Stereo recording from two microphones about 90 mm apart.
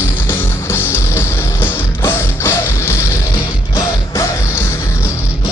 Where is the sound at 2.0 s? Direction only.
30° left (ahead or behind).